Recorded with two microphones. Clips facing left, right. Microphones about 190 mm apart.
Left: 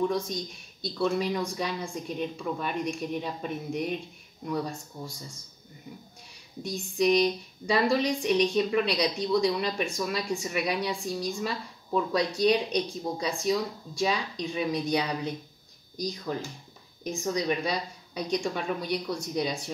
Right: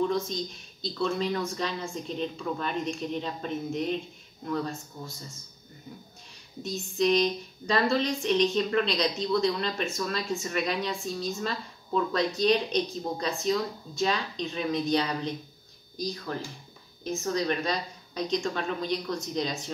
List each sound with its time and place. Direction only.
1.0 s speech: 10° left (ahead or behind)
6.6 s speech: 15° left (ahead or behind)